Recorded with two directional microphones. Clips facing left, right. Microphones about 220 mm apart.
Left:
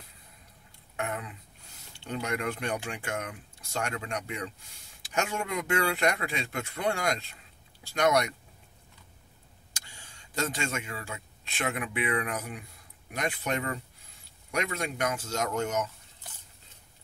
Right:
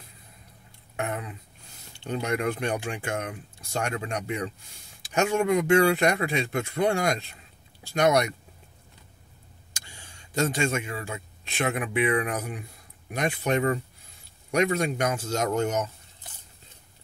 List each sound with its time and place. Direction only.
0.9 s speech: 25° right (ahead or behind)
10.5 s speech: 25° right (ahead or behind)